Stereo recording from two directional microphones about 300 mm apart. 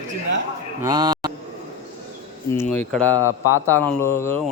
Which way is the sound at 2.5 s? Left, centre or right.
Centre.